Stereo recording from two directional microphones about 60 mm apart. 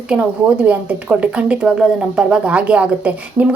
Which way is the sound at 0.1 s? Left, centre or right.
Centre.